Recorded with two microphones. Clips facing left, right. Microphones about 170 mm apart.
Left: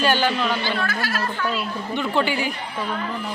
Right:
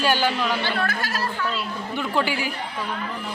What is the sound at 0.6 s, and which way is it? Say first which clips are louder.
Speech: left 1 dB; 55° right (ahead or behind).